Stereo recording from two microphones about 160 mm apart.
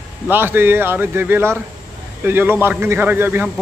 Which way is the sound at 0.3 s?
15° right (ahead or behind).